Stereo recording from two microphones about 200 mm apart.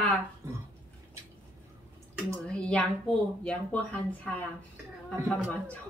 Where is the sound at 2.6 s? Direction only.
5° left (ahead or behind).